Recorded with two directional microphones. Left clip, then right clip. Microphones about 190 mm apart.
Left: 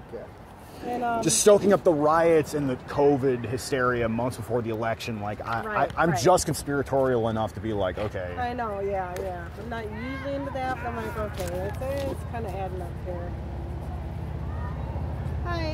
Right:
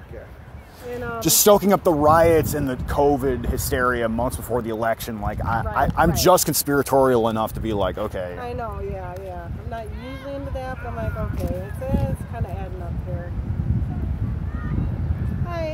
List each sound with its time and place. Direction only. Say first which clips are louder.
1.2 s speech: right 4 dB; 50° right (ahead or behind)
8.4 s speech: left 1 dB; centre (ahead or behind)
10.2 s speech: left 1 dB; 5° left (ahead or behind)
15.4 s speech: right 3 dB; 5° left (ahead or behind)